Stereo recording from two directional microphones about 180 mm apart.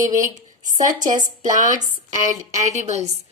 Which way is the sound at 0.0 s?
45° right (ahead or behind).